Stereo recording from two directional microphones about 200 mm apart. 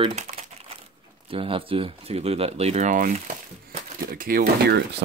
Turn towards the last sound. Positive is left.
turn(degrees=-50)  # may be behind; listen again after turning